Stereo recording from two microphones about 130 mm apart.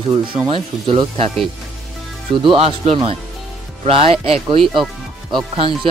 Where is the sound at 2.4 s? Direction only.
50° right (ahead or behind).